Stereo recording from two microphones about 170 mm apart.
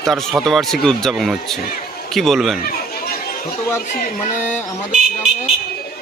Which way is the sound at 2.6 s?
60° left (ahead or behind).